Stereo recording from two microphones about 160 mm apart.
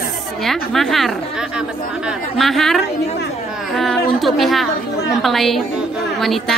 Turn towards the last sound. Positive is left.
turn(degrees=0)  # may be behind; listen again after turning